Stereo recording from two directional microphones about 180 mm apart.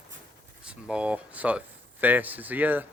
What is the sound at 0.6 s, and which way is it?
Speech, 5° right (ahead or behind).